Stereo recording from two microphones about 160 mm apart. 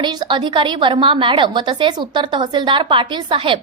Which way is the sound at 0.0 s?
25° right (ahead or behind).